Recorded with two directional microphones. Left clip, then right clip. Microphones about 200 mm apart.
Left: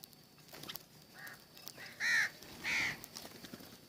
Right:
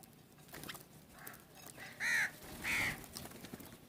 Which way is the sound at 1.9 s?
5° left (ahead or behind).